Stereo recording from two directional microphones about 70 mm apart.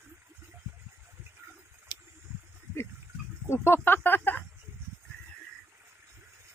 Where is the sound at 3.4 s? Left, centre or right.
Left.